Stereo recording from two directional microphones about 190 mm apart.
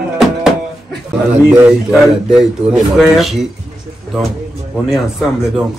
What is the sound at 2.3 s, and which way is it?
Speech, 5° right (ahead or behind).